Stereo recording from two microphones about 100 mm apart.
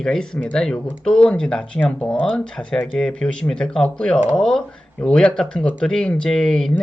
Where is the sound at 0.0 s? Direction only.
10° left (ahead or behind).